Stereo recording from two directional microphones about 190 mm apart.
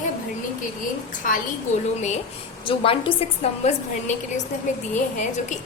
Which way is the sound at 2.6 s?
30° left (ahead or behind).